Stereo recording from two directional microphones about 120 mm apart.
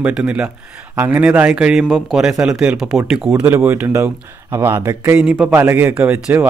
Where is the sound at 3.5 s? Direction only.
15° right (ahead or behind).